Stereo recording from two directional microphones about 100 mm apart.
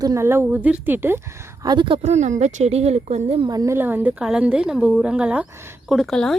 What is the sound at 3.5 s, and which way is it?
Speech, 40° right (ahead or behind).